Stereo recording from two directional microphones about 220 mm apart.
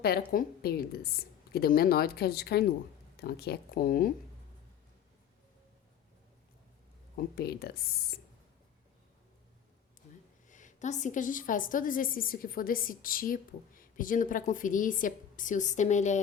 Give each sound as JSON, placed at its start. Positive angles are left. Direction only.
{"t": 0.3, "sound": "a woman's voice", "side_deg": 40}
{"t": 7.2, "sound": "a woman's voice", "side_deg": 45}
{"t": 10.5, "sound": "a woman's voice", "side_deg": 35}